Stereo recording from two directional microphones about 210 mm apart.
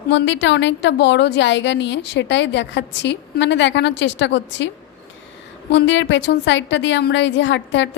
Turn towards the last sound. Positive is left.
turn(degrees=60)  # may be behind; listen again after turning